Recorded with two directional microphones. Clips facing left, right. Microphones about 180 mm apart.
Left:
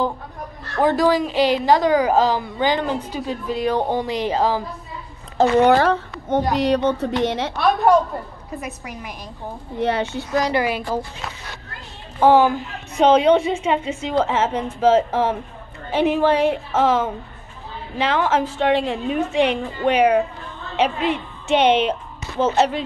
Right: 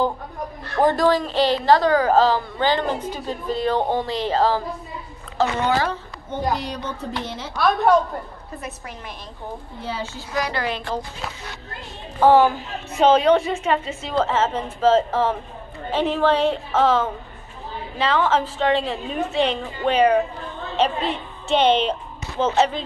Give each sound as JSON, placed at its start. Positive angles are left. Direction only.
{"t": 0.7, "sound": "a woman's voice", "side_deg": 5}
{"t": 5.6, "sound": "a woman's voice", "side_deg": 70}
{"t": 8.5, "sound": "a woman's voice", "side_deg": 10}
{"t": 9.8, "sound": "a woman's voice", "side_deg": 70}
{"t": 10.5, "sound": "a woman's voice", "side_deg": 10}
{"t": 12.2, "sound": "a woman's voice", "side_deg": 15}